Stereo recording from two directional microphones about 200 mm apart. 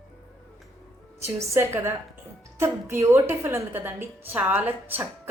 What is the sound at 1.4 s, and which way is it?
A woman's voice, 15° right (ahead or behind).